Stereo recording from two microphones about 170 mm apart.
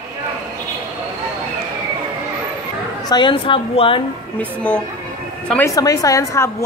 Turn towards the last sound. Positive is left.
turn(degrees=15)  # may be behind; listen again after turning